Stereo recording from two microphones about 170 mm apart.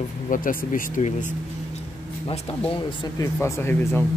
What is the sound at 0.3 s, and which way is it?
Speech, 55° left (ahead or behind).